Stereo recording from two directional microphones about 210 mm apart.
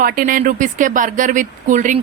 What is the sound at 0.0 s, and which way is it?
A woman's voice, 40° right (ahead or behind).